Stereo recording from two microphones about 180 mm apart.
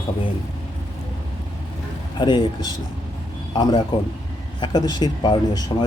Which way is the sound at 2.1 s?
25° left (ahead or behind).